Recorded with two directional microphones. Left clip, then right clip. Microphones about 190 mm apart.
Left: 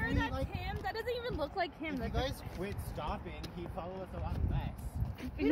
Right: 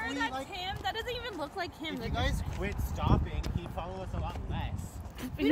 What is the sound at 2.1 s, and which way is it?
Speech, 55° left (ahead or behind).